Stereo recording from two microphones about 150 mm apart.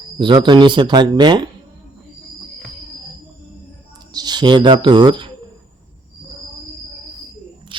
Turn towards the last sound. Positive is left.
turn(degrees=-35)  # may be behind; listen again after turning